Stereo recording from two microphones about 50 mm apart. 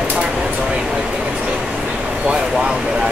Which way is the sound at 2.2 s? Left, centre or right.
Centre.